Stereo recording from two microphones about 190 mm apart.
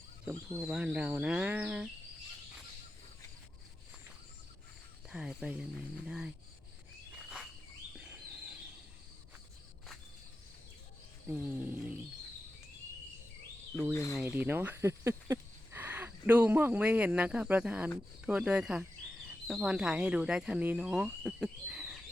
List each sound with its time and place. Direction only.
0.6 s speech: 5° right (ahead or behind)
5.0 s speech: 5° right (ahead or behind)
7.9 s insect: 5° right (ahead or behind)
11.3 s speech: 10° right (ahead or behind)
13.9 s speech: 15° left (ahead or behind)
14.2 s speech: 10° right (ahead or behind)